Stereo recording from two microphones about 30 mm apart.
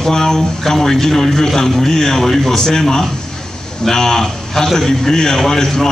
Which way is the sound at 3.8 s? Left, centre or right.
Centre.